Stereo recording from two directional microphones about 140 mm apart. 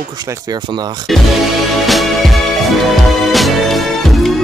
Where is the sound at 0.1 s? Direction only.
25° right (ahead or behind).